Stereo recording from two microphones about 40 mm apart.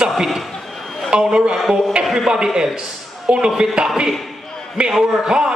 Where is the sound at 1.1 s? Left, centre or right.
Right.